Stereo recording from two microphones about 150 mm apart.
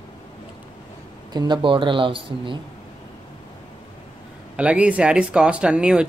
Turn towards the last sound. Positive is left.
turn(degrees=-5)  # may be behind; listen again after turning